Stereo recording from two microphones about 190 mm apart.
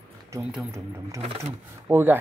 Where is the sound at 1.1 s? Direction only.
30° right (ahead or behind).